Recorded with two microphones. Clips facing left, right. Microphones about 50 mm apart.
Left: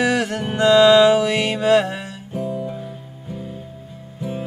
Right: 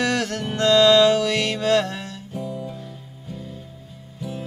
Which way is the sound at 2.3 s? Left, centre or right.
Left.